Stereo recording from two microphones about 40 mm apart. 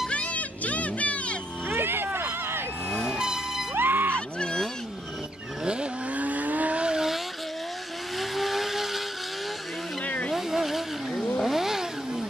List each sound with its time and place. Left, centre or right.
0.1 s music: left
1.7 s a sound: right
3.1 s vehicle: centre
3.7 s a sound: right
6.1 s vehicle: right
8.2 s vehicle: centre
10.0 s vehicle: left
10.3 s vehicle: centre